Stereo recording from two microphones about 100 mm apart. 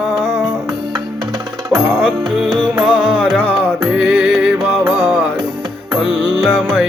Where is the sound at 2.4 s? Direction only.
Centre (ahead or behind).